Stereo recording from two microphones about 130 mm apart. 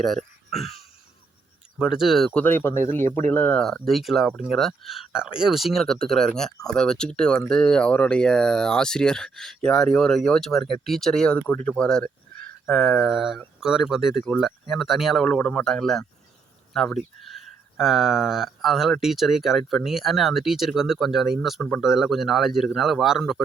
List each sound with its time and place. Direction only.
1.9 s speech: 5° right (ahead or behind)
2.4 s speech: 15° left (ahead or behind); by 23.4 s centre (ahead or behind)